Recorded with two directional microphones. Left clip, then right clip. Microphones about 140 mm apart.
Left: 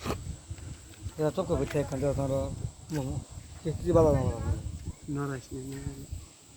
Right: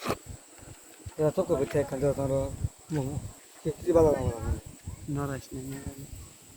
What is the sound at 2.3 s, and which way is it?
Speech, 10° right (ahead or behind).